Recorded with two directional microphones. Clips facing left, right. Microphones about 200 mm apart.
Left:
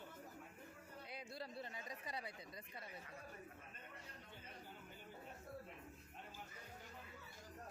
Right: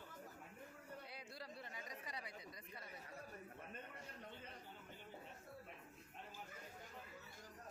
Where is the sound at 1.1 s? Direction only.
25° left (ahead or behind).